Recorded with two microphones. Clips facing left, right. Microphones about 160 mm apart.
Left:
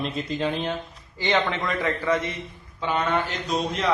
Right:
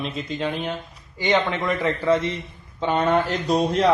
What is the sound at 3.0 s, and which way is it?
Mantra, 45° right (ahead or behind).